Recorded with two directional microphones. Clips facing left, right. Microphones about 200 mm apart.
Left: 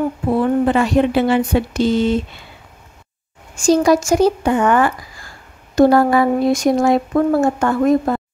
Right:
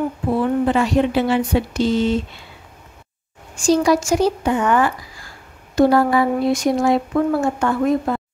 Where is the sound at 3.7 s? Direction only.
45° left (ahead or behind).